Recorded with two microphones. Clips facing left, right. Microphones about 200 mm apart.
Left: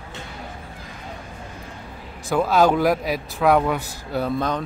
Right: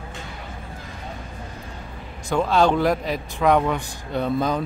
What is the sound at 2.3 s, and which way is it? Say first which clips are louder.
A man's voice: left 1 dB; 5° left (ahead or behind).